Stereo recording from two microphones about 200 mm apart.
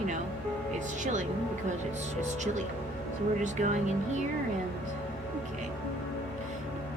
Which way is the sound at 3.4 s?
35° right (ahead or behind).